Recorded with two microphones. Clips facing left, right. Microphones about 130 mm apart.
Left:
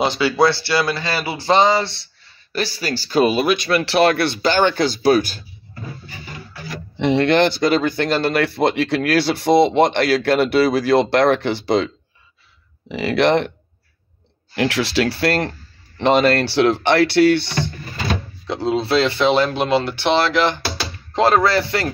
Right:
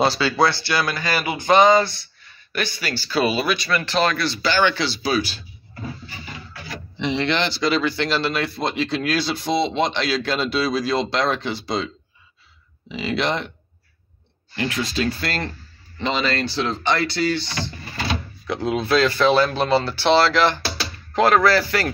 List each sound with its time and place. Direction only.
0.0 s speech: 20° left (ahead or behind); by 5.4 s 50° left (ahead or behind)
7.0 s speech: 55° left (ahead or behind)
14.5 s speech: 80° left; by 17.7 s 60° left (ahead or behind)
18.5 s speech: 30° left (ahead or behind)